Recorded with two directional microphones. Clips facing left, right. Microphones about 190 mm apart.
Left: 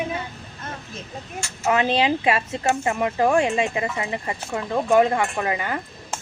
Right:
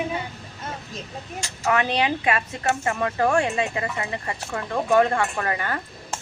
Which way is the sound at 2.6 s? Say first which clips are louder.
Left 2 dB; 15° left (ahead or behind).